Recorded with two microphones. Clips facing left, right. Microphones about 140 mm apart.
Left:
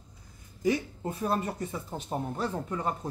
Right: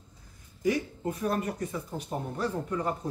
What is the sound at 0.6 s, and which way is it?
Speech, 25° left (ahead or behind).